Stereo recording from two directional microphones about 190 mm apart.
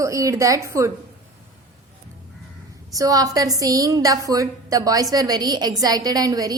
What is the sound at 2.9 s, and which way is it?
A woman's voice, 20° right (ahead or behind).